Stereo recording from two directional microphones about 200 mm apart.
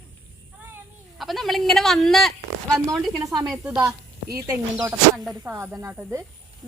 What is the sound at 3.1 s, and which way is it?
Speech, 15° right (ahead or behind).